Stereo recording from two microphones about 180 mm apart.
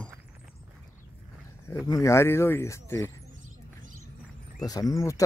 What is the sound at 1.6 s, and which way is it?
Speech, 20° left (ahead or behind).